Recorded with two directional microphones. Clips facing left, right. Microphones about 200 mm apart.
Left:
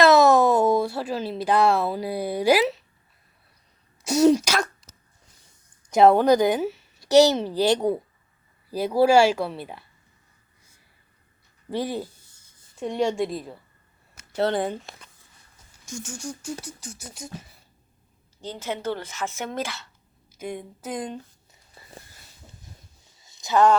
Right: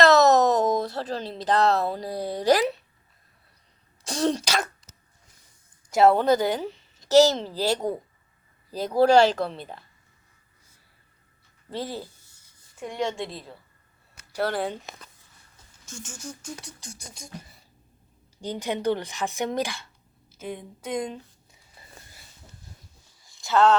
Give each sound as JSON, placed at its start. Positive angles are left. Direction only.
{"t": 0.0, "sound": "a sound", "side_deg": 10}
{"t": 4.0, "sound": "speech", "side_deg": 10}
{"t": 5.9, "sound": "speech", "side_deg": 20}
{"t": 11.7, "sound": "speech", "side_deg": 15}
{"t": 16.0, "sound": "speech", "side_deg": 10}
{"t": 18.3, "sound": "speech", "side_deg": -15}
{"t": 20.4, "sound": "speech", "side_deg": 10}
{"t": 23.2, "sound": "a sound", "side_deg": 20}